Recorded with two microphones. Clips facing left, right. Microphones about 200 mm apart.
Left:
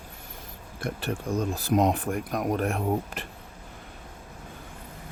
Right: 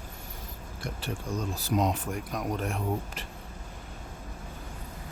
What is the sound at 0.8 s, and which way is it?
Speech, 55° left (ahead or behind).